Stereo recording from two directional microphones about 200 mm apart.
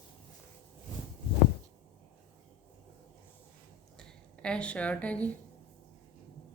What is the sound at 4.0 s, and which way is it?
Speech, 5° left (ahead or behind).